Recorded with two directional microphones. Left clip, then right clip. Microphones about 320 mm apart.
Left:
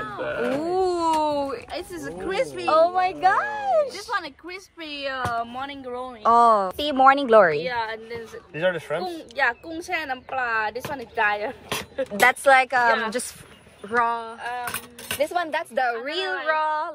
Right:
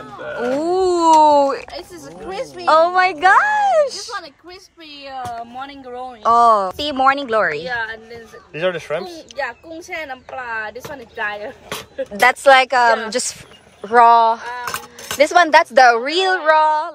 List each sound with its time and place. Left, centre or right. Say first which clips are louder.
0.6 s a sound: right 9 dB; centre
1.7 s speech: even; left
2.7 s speech: right 7 dB; right
4.1 s a woman's voice: left 1 dB; left
5.5 s speech: right 1 dB; centre
8.5 s speech: right 4 dB; right
10.3 s speech: left 2 dB; centre
15.2 s a woman's voice: right 15 dB; centre